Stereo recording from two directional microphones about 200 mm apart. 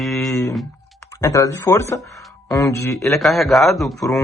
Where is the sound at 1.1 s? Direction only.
15° left (ahead or behind).